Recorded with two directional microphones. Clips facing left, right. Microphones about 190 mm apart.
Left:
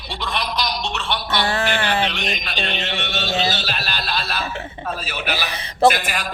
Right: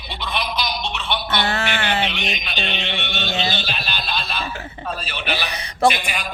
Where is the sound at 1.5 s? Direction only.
35° left (ahead or behind).